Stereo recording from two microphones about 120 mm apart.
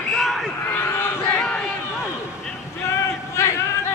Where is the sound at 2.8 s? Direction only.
20° left (ahead or behind).